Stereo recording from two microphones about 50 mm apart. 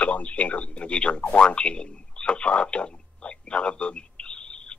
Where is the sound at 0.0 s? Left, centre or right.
Left.